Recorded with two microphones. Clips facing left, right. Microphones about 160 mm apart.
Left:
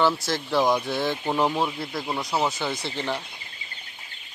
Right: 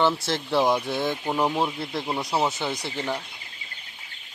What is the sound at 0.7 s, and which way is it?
Speech, 5° right (ahead or behind).